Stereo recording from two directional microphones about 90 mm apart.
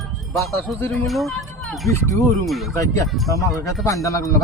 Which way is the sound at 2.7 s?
40° left (ahead or behind).